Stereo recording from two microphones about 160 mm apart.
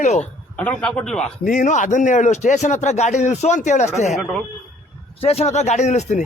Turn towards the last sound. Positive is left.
turn(degrees=45)  # may be behind; listen again after turning